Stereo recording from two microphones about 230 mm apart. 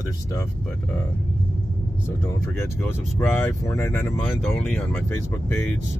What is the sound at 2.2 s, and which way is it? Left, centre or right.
Speech, centre.